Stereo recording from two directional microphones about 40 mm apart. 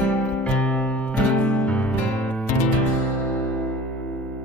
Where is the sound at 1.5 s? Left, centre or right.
Left.